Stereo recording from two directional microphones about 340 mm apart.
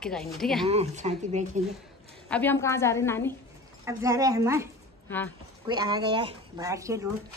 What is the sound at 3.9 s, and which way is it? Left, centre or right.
Speech, centre.